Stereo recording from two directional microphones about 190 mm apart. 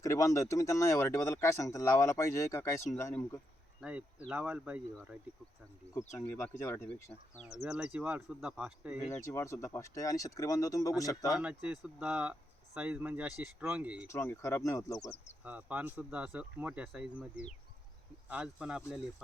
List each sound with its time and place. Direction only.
0.0 s speech: 15° left (ahead or behind)
3.8 s speech: 5° right (ahead or behind)
6.1 s speech: 10° left (ahead or behind); by 9.0 s 5° right (ahead or behind)
9.0 s speech: 15° left (ahead or behind)
11.3 s speech: 5° right (ahead or behind)
14.1 s speech: 10° left (ahead or behind)
15.4 s speech: 5° right (ahead or behind)